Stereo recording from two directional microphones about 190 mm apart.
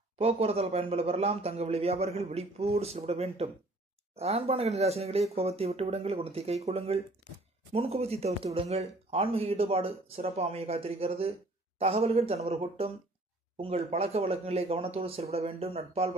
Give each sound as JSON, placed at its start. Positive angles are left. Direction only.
{"t": 0.2, "sound": "speech", "side_deg": -30}